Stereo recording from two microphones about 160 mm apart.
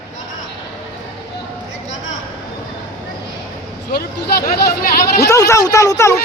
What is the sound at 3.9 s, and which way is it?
Speech, 75° left (ahead or behind).